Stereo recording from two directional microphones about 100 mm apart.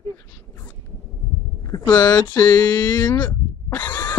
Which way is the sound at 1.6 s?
40° left (ahead or behind).